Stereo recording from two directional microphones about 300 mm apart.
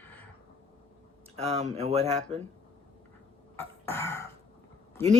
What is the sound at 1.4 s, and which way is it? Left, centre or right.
Speech, right.